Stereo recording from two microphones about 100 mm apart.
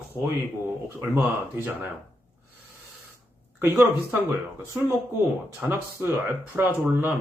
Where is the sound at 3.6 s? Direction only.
20° right (ahead or behind).